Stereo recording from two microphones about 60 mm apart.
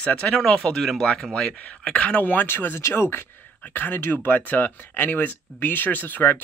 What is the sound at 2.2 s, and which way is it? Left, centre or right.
Speech, left.